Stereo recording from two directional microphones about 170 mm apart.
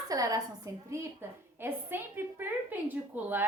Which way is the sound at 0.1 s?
20° right (ahead or behind).